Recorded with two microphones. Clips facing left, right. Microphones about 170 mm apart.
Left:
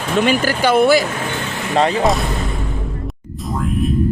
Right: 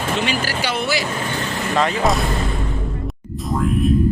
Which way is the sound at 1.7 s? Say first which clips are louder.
Left 4 dB; 35° left (ahead or behind).